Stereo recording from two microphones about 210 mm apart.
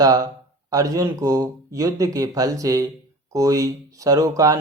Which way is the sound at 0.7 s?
15° right (ahead or behind).